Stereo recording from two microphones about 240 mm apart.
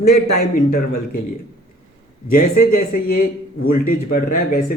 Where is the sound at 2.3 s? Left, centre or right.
Left.